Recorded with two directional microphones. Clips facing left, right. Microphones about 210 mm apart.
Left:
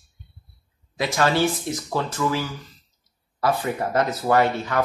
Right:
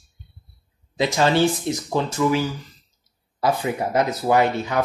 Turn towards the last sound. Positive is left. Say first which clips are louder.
# right 1 dB
turn(degrees=-15)  # may be behind; listen again after turning